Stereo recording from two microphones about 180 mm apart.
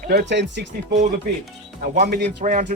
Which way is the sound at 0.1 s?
70° right (ahead or behind).